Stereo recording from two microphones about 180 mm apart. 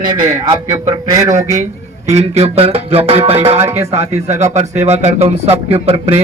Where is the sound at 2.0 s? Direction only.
35° right (ahead or behind).